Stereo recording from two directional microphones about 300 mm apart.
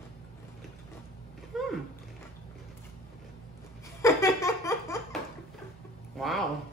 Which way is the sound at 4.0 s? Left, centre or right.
Centre.